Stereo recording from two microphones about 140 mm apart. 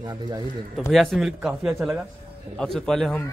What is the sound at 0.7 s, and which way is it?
A man's voice, centre (ahead or behind).